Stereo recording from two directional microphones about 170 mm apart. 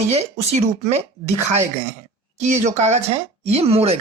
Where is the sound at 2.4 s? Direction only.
45° right (ahead or behind).